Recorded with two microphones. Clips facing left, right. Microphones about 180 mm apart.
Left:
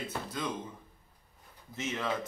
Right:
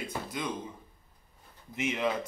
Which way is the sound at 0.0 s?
10° right (ahead or behind).